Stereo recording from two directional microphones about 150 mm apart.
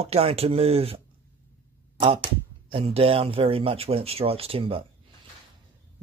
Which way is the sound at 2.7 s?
40° right (ahead or behind).